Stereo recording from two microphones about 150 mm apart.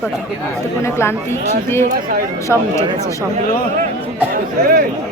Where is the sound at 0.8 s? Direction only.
15° left (ahead or behind).